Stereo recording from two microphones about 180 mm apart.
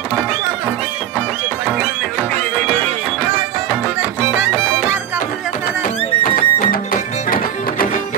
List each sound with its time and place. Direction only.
6.2 s music: 50° left (ahead or behind)